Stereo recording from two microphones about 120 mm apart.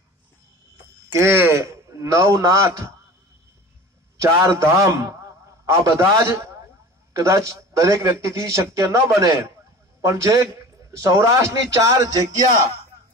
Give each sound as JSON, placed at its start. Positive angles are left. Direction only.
{"t": 1.1, "sound": "a man's voice", "side_deg": -20}
{"t": 4.2, "sound": "a man's voice", "side_deg": -25}